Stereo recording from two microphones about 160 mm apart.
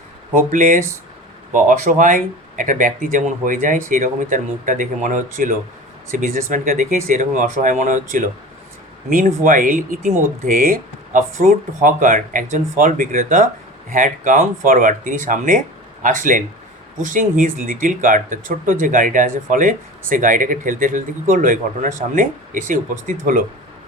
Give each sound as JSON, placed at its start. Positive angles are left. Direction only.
{"t": 0.3, "sound": "speech", "side_deg": -55}